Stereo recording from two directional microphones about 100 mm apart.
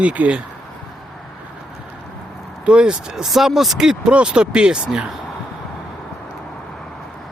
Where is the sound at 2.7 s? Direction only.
10° right (ahead or behind).